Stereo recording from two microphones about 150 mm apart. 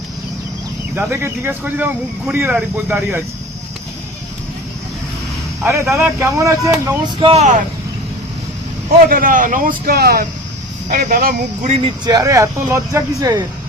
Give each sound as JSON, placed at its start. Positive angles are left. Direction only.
{"t": 0.9, "sound": "speech", "side_deg": -15}
{"t": 5.6, "sound": "speech", "side_deg": -15}
{"t": 7.2, "sound": "speech", "side_deg": -35}
{"t": 9.0, "sound": "speech", "side_deg": -70}
{"t": 10.8, "sound": "speech", "side_deg": -75}
{"t": 11.9, "sound": "speech", "side_deg": -25}